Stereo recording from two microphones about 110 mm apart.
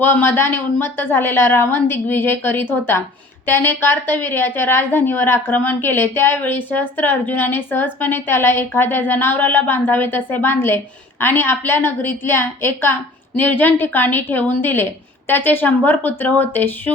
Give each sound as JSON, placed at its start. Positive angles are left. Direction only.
{"t": 0.0, "sound": "a woman's voice", "side_deg": 20}